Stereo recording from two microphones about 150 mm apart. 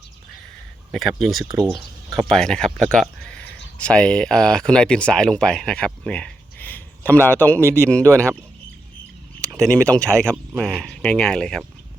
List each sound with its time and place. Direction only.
0.9 s speech: centre (ahead or behind)
8.0 s speech: 20° right (ahead or behind)
9.5 s speech: 5° left (ahead or behind)